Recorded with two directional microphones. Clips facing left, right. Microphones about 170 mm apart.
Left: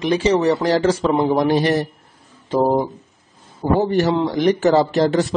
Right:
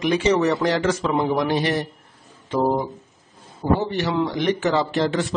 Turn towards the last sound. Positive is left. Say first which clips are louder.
# left 5 dB
turn(degrees=40)  # may be behind; listen again after turning